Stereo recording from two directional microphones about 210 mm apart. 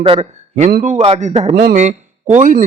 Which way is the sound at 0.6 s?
40° right (ahead or behind).